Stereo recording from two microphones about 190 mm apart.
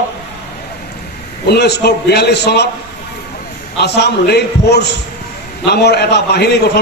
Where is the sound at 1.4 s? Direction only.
60° left (ahead or behind).